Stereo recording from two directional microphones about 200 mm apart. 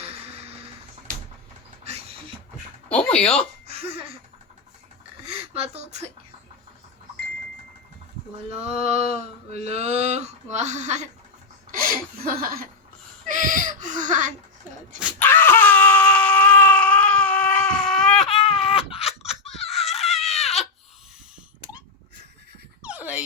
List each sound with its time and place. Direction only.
0.0 s music: 30° right (ahead or behind)
1.8 s beatboxing: 30° right (ahead or behind)
2.9 s speech: 5° left (ahead or behind)
3.7 s laughter: 30° right (ahead or behind)
5.5 s speech: 30° right (ahead or behind)
8.4 s speech: 30° right (ahead or behind)
12.4 s speech: 45° right (ahead or behind)
15.2 s a sound: 10° left (ahead or behind)
18.7 s a sound: 30° left (ahead or behind)
19.7 s wail: centre (ahead or behind)
20.4 s baby cry: centre (ahead or behind)
22.8 s a sound: 5° right (ahead or behind)